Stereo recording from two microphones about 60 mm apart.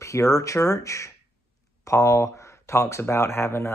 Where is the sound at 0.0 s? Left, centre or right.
Left.